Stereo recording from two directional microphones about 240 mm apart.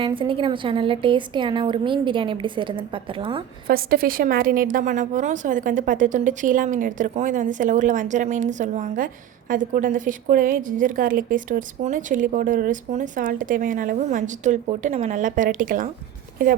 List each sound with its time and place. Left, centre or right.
0.0 s a woman's voice: right
3.7 s a woman's voice: right